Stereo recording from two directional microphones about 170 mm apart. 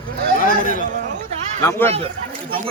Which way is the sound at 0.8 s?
50° right (ahead or behind).